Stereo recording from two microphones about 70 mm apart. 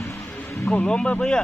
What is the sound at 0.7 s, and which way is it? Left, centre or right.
Speech, centre.